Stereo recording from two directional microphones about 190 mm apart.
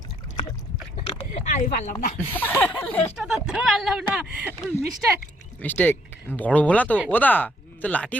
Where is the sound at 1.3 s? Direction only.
40° left (ahead or behind).